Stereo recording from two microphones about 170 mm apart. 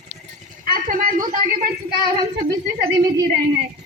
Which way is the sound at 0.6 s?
55° right (ahead or behind).